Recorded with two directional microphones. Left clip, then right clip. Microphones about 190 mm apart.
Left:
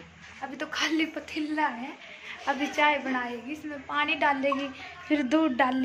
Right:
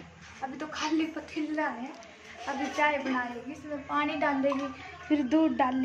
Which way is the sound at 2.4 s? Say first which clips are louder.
Left 3 dB; 35° left (ahead or behind).